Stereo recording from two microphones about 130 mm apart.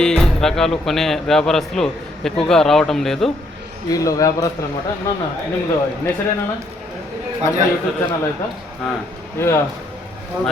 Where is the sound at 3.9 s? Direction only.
25° left (ahead or behind).